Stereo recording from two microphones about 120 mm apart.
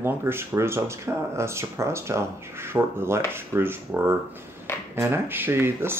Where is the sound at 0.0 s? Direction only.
20° right (ahead or behind).